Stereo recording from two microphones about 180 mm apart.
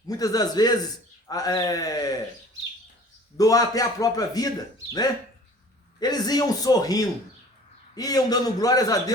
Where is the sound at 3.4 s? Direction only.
20° left (ahead or behind).